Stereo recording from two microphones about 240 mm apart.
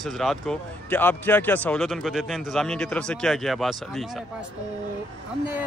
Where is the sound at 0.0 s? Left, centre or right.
Centre.